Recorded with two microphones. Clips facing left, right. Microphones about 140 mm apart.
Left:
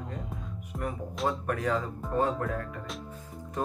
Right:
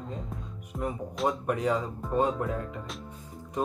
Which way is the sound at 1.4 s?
20° right (ahead or behind).